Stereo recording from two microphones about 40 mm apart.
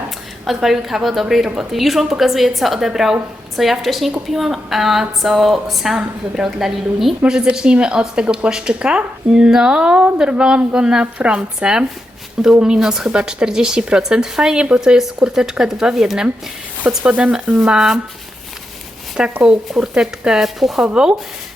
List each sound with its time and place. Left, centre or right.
0.4 s a woman's voice: centre
6.0 s speech: centre
7.3 s a woman's voice: right
11.3 s a woman's voice: centre
17.0 s speech: right
17.7 s speech: centre
19.2 s a woman's voice: right
19.6 s speech: centre
20.4 s a woman's voice: centre
20.8 s a woman's voice: right